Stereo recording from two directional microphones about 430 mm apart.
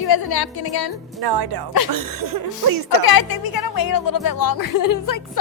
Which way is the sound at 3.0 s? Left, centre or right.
Left.